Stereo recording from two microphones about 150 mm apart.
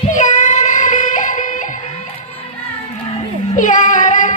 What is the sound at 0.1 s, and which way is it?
Child singing, 55° left (ahead or behind).